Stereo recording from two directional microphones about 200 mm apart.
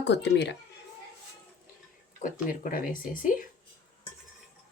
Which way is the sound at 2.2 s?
40° left (ahead or behind).